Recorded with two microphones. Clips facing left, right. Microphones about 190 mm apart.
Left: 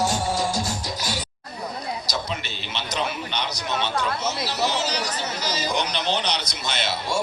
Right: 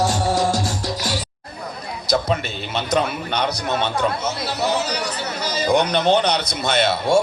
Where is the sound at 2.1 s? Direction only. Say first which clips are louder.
Right 9 dB; 55° right (ahead or behind).